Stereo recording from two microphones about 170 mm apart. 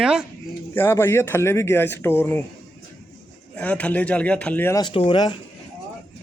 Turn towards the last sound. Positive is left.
turn(degrees=30)  # may be behind; listen again after turning